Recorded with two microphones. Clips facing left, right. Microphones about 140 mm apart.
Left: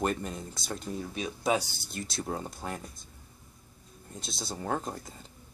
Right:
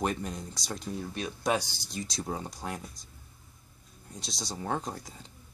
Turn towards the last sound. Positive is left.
turn(degrees=0)  # may be behind; listen again after turning